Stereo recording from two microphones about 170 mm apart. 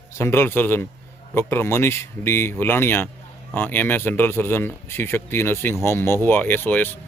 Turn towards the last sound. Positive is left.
turn(degrees=10)  # may be behind; listen again after turning